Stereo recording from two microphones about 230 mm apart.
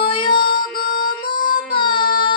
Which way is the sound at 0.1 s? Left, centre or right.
Left.